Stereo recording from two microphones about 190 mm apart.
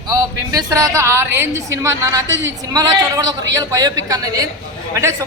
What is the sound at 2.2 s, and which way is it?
Speech, 75° right (ahead or behind).